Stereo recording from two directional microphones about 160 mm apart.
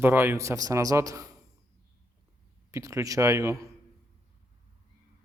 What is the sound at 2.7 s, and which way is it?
Speech, 20° right (ahead or behind).